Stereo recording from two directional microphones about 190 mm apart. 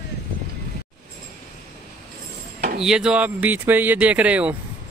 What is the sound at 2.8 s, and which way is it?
Speech, 5° right (ahead or behind).